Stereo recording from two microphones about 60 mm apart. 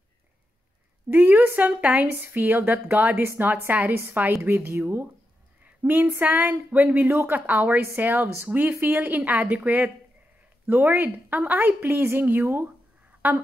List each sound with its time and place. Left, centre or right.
1.1 s a woman's voice: right
2.1 s a woman's voice: right